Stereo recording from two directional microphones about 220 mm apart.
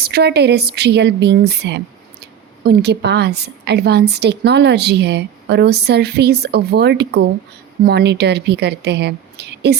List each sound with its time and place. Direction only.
0.0 s a woman's voice: 45° right (ahead or behind)